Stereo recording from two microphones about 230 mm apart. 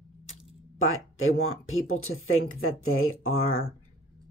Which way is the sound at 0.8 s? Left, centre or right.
Left.